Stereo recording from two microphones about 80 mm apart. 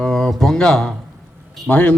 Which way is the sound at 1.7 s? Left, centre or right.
Centre.